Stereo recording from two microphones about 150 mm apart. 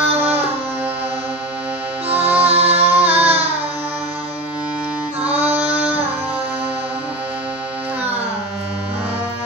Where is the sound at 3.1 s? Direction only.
45° right (ahead or behind).